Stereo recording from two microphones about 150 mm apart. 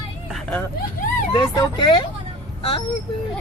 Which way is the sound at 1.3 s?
30° left (ahead or behind).